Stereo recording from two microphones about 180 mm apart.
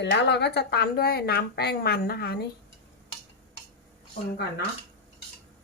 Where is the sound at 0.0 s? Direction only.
75° left (ahead or behind); by 2.4 s 60° left (ahead or behind).